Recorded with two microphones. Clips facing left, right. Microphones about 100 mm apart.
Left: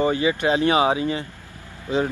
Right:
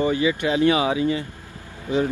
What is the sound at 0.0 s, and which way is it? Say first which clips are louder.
Speech: left 1 dB; 35° left (ahead or behind).